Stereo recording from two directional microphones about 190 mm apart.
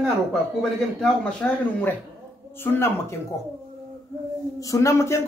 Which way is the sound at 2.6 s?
10° left (ahead or behind).